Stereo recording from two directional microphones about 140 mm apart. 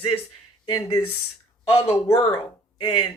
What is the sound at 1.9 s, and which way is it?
Speech, 20° left (ahead or behind).